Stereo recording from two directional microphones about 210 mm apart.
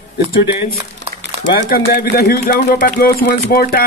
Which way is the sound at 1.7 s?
45° left (ahead or behind).